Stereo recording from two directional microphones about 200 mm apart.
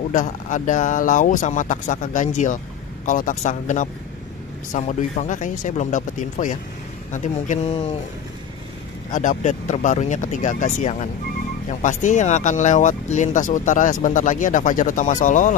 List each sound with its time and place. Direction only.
0.1 s speech: 40° left (ahead or behind)
9.1 s speech: 40° left (ahead or behind)